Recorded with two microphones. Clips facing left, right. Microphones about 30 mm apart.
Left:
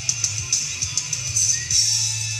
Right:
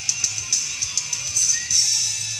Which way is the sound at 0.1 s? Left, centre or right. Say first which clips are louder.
Right 1 dB; centre.